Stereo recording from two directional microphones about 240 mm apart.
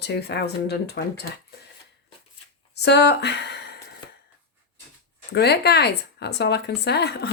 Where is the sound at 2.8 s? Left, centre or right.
Left.